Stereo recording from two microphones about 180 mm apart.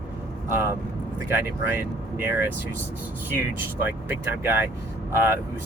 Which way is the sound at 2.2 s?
10° right (ahead or behind).